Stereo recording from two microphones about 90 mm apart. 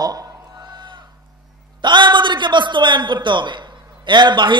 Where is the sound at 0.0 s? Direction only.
45° right (ahead or behind).